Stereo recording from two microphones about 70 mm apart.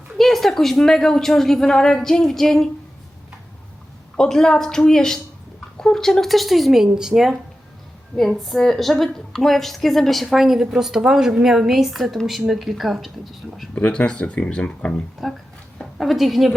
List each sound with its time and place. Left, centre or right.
0.2 s a woman's voice: centre
4.2 s a woman's voice: centre
8.4 s a woman's voice: centre
13.7 s speech: centre
15.2 s a woman's voice: centre